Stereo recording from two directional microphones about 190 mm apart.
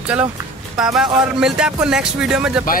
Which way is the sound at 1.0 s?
5° right (ahead or behind).